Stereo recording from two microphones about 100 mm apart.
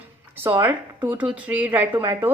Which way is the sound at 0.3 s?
20° right (ahead or behind).